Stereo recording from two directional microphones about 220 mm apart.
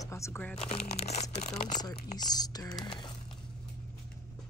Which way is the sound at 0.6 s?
30° left (ahead or behind).